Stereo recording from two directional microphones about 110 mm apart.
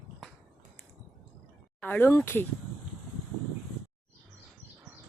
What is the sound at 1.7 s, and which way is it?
Speech, 15° left (ahead or behind).